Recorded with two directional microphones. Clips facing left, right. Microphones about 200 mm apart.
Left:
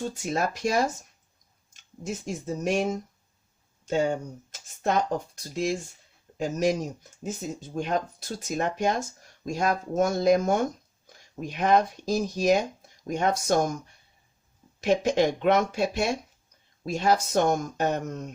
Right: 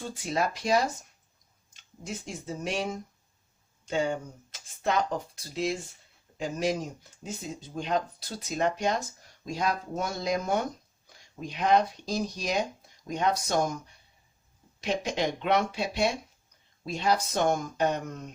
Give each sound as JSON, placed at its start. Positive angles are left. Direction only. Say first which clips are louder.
{"t": 0.2, "sound": "speech", "louder": "even", "side_deg": 45}
{"t": 3.8, "sound": "speech", "louder": "left 3 dB", "side_deg": 45}
{"t": 7.8, "sound": "speech", "louder": "left 1 dB", "side_deg": 50}
{"t": 14.8, "sound": "speech", "louder": "left 7 dB", "side_deg": 50}